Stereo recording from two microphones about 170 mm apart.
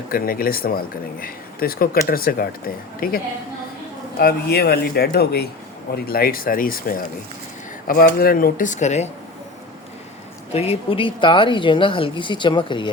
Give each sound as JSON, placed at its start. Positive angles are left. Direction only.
{"t": 0.1, "sound": "speech", "side_deg": 60}
{"t": 4.2, "sound": "speech", "side_deg": 70}
{"t": 10.5, "sound": "a woman's voice", "side_deg": 35}